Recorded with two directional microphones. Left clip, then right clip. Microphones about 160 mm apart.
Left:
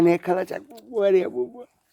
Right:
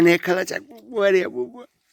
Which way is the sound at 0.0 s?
10° right (ahead or behind).